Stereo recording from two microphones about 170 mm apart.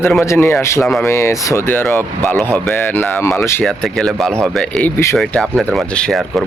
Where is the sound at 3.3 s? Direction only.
15° left (ahead or behind).